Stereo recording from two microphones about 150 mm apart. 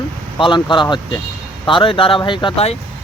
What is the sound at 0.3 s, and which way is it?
Speech, 35° left (ahead or behind).